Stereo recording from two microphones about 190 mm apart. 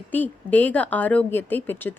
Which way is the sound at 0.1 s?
10° left (ahead or behind).